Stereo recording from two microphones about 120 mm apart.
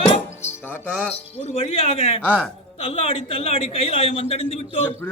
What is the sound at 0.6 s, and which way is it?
Music, 15° left (ahead or behind).